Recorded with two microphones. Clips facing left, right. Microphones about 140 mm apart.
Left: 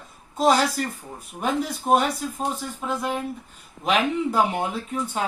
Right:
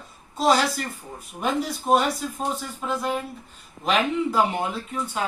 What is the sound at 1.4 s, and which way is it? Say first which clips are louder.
Speech: even; centre (ahead or behind).